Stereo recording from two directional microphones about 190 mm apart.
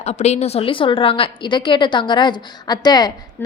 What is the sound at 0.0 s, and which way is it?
A woman's voice, 35° left (ahead or behind).